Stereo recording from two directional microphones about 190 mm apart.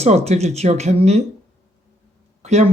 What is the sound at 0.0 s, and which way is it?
Speech, 35° right (ahead or behind).